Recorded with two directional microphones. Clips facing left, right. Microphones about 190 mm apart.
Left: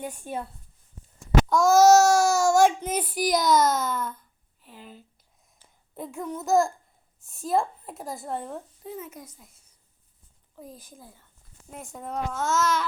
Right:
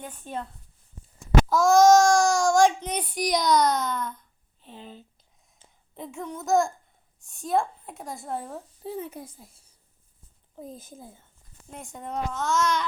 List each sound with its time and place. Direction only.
0.0 s speech: 10° left (ahead or behind)
1.5 s speech: centre (ahead or behind)
4.6 s speech: 25° right (ahead or behind)
6.0 s speech: centre (ahead or behind)
8.8 s a child's voice: 30° right (ahead or behind)
11.7 s speech: centre (ahead or behind)